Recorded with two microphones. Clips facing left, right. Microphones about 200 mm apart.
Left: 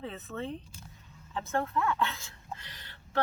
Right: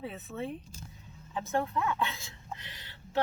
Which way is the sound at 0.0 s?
10° right (ahead or behind).